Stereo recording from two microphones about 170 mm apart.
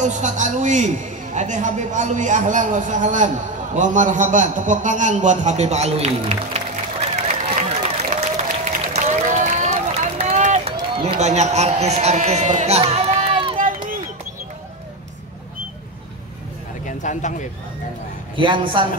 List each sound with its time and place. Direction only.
0.0 s a man's voice: 45° right (ahead or behind)
8.6 s run: 45° right (ahead or behind)
11.1 s speech: 40° right (ahead or behind)
13.6 s run: 50° right (ahead or behind)
16.8 s a sound: 45° left (ahead or behind)
18.3 s a man's voice: 30° right (ahead or behind)